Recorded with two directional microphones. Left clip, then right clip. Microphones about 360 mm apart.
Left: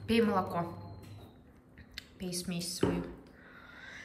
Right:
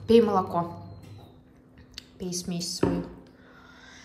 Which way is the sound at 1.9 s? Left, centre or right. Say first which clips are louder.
Right 5 dB; centre.